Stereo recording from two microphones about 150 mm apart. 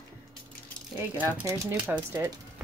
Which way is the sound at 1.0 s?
10° right (ahead or behind).